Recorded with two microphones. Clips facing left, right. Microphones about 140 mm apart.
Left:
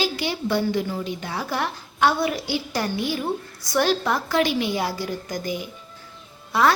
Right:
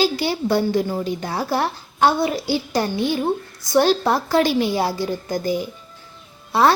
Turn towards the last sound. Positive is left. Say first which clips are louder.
# right 3 dB
turn(degrees=-30)  # may be behind; listen again after turning